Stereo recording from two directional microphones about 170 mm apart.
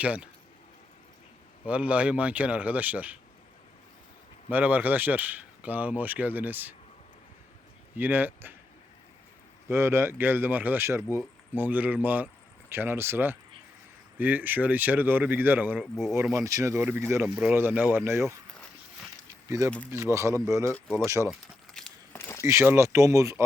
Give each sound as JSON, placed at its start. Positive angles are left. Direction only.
{"t": 0.0, "sound": "speech", "side_deg": -5}
{"t": 1.6, "sound": "speech", "side_deg": -10}
{"t": 4.4, "sound": "speech", "side_deg": -10}
{"t": 7.9, "sound": "speech", "side_deg": -10}
{"t": 9.6, "sound": "speech", "side_deg": -15}
{"t": 16.3, "sound": "speech", "side_deg": -20}
{"t": 17.2, "sound": "speech", "side_deg": -5}
{"t": 19.5, "sound": "speech", "side_deg": -20}
{"t": 21.8, "sound": "a sound", "side_deg": 5}
{"t": 22.1, "sound": "a sound", "side_deg": 15}
{"t": 22.4, "sound": "speech", "side_deg": -15}